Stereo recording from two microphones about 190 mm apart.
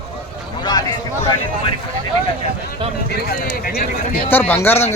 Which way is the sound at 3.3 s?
50° left (ahead or behind).